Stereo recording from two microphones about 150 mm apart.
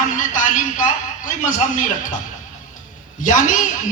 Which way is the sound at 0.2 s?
60° left (ahead or behind).